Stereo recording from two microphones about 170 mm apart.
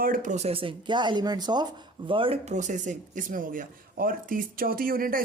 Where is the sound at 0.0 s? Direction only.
55° right (ahead or behind).